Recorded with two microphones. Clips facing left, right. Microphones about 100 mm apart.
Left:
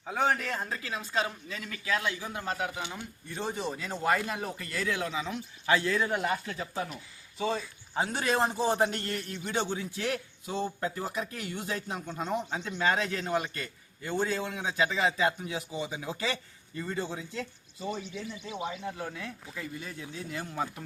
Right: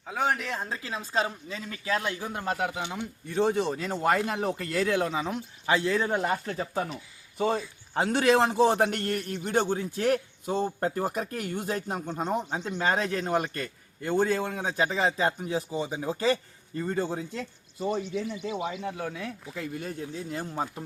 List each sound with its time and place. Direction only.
0.0 s speech: 5° right (ahead or behind); by 1.9 s 25° right (ahead or behind)
1.9 s a man's voice: 40° right (ahead or behind)
2.5 s speech: 65° right (ahead or behind)
3.3 s speech: 90° right; by 3.9 s 70° right (ahead or behind)
4.0 s speech: 60° right (ahead or behind); by 5.4 s 45° right (ahead or behind)
5.6 s speech: 25° right (ahead or behind)
6.3 s a man's voice: 35° right (ahead or behind)
7.3 s a man's voice: 50° right (ahead or behind)
18.1 s speech: 65° right (ahead or behind); by 20.8 s 35° right (ahead or behind)